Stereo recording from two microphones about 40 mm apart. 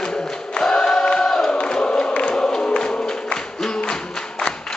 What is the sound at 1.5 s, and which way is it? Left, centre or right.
Chant, left.